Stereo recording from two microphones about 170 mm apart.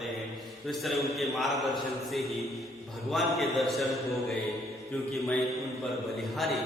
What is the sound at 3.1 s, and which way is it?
Speech, centre (ahead or behind).